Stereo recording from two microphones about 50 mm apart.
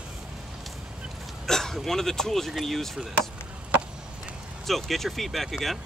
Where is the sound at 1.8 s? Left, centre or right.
Centre.